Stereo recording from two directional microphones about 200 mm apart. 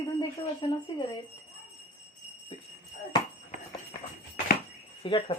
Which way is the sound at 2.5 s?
25° left (ahead or behind).